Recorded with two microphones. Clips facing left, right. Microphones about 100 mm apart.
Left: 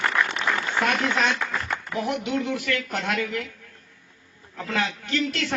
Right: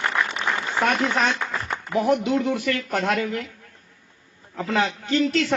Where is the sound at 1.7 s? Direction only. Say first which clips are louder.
Right 9 dB; 25° right (ahead or behind).